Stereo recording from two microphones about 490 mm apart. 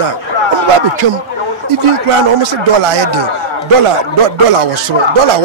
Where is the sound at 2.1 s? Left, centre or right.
Right.